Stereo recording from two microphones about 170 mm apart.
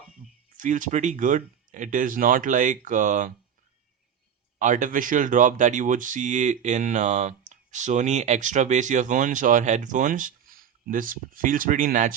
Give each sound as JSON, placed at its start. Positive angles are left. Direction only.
{"t": 0.5, "sound": "speech", "side_deg": -50}
{"t": 4.6, "sound": "speech", "side_deg": -50}